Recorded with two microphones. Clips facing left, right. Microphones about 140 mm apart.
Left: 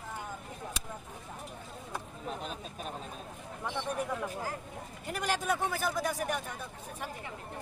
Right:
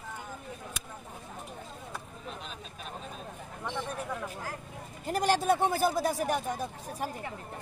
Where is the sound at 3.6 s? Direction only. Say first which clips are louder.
Left 1 dB; 5° left (ahead or behind).